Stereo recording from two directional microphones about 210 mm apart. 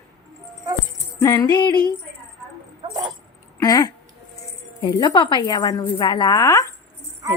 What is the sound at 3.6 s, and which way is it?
A woman's voice, 15° left (ahead or behind).